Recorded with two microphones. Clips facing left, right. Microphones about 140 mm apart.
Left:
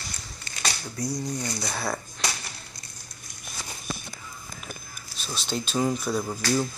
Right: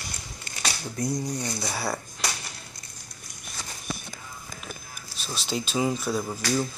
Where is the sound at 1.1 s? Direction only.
20° right (ahead or behind).